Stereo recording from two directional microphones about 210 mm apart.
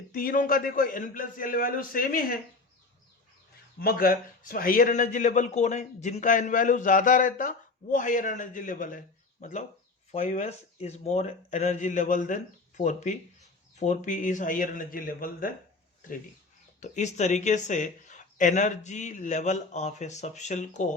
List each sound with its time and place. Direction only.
0.1 s a man's voice: 40° left (ahead or behind)
3.8 s a man's voice: 45° left (ahead or behind)
16.8 s a man's voice: 35° left (ahead or behind)